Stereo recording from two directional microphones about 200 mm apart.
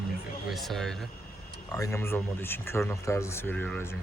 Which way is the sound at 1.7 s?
15° left (ahead or behind).